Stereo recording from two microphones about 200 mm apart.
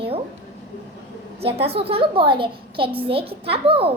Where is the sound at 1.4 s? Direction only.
30° right (ahead or behind).